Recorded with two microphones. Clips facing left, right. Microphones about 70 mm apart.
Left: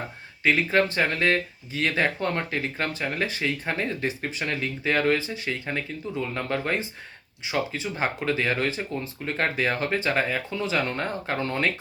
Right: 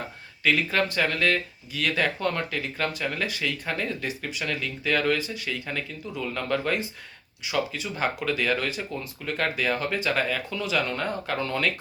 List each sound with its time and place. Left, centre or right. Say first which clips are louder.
0.4 s speech: left 2 dB; left